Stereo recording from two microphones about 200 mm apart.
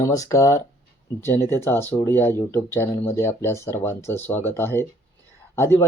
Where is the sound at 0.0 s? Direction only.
15° left (ahead or behind).